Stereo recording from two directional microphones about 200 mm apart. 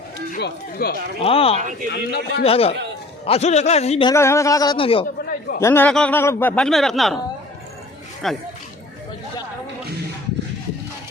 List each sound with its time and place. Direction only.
0.3 s speech: 55° left (ahead or behind)
1.2 s speech: 30° left (ahead or behind)
1.5 s speech: 40° right (ahead or behind)
1.9 s speech: 55° left (ahead or behind)
2.4 s a man's voice: 30° left (ahead or behind)
4.1 s a man's voice: 15° left (ahead or behind)
5.5 s speech: 10° left (ahead or behind)
8.2 s speech: centre (ahead or behind)